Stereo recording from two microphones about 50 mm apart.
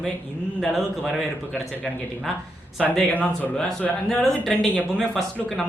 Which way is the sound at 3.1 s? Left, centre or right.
Left.